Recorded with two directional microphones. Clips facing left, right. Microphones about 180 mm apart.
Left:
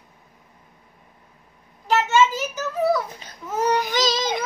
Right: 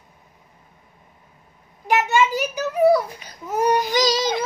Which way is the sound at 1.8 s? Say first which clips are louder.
Even; 15° right (ahead or behind).